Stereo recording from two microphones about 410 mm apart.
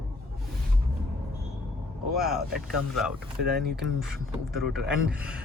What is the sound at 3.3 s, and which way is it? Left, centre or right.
Speech, right.